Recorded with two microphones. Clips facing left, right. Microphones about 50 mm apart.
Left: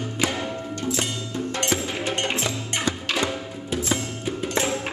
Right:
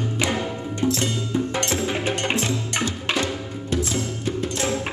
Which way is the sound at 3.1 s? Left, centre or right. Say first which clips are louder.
Right 1 dB; centre.